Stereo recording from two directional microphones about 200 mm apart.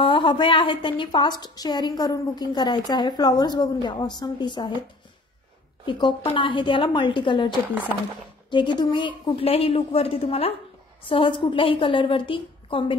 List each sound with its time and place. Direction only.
0.0 s a woman's voice: 25° left (ahead or behind)
5.9 s a woman's voice: 25° left (ahead or behind)